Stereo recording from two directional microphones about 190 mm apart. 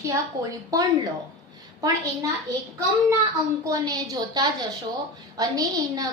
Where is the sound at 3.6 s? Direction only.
20° right (ahead or behind).